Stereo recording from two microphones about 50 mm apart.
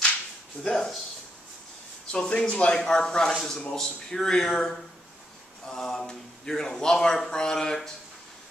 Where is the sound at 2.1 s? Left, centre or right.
Centre.